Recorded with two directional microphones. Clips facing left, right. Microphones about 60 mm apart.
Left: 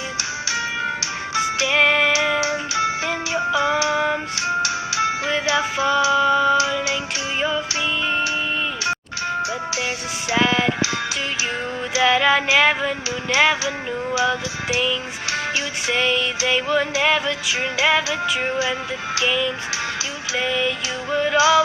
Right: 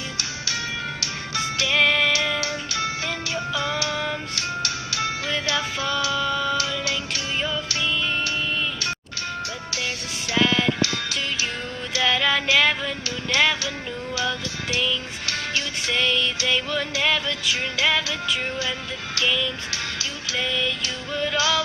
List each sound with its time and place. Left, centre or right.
1.4 s music: centre
11.9 s music: centre